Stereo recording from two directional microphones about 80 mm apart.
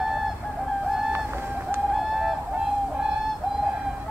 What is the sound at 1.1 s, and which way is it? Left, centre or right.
Boat, right.